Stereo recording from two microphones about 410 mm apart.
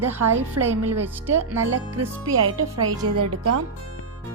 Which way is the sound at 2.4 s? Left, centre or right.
Right.